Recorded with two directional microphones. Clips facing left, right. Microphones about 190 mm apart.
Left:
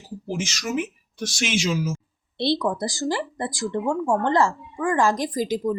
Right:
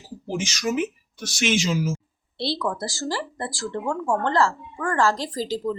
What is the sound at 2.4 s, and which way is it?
Speech, 20° left (ahead or behind).